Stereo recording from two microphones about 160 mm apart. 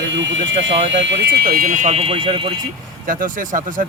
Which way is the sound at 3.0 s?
60° right (ahead or behind).